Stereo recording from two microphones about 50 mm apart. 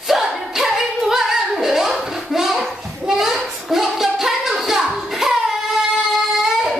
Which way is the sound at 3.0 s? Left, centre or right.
Centre.